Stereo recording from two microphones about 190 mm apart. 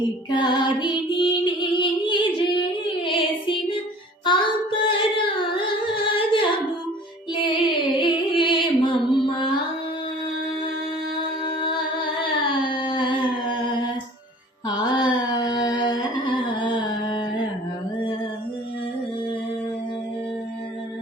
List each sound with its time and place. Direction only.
0.3 s music: 25° left (ahead or behind)
2.8 s child singing: 25° left (ahead or behind)
4.3 s singing: 25° left (ahead or behind)
7.3 s music: 25° left (ahead or behind)
11.2 s music: 25° left (ahead or behind)
14.7 s a sound: 20° left (ahead or behind)